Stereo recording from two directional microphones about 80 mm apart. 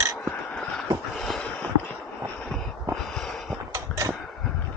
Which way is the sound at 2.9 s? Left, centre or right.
Centre.